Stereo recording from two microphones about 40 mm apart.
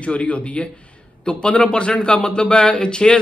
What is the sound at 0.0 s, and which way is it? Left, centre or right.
A man's voice, left.